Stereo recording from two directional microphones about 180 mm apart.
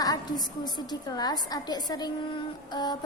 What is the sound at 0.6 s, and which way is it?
A woman's voice, 20° left (ahead or behind).